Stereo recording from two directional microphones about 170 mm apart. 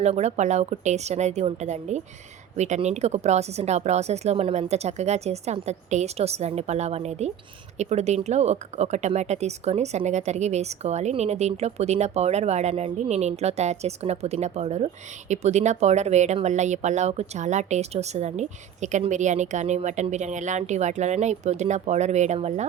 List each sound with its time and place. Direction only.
0.0 s speech: 40° right (ahead or behind)